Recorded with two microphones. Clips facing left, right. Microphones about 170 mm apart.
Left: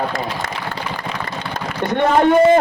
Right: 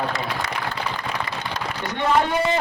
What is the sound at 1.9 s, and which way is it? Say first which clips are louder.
Speech: left 7 dB; 55° left (ahead or behind).